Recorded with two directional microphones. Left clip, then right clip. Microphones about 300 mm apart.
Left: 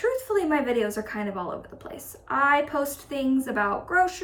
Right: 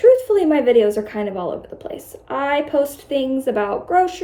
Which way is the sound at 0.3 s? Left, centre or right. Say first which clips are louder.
Right 9 dB; centre.